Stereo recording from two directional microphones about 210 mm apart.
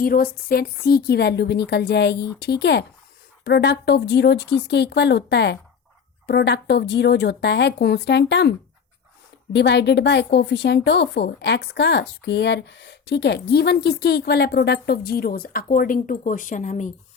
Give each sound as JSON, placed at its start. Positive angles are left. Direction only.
{"t": 0.0, "sound": "a woman's voice", "side_deg": 45}